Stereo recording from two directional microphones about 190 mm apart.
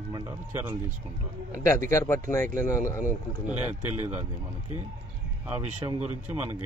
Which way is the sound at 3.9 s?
10° right (ahead or behind).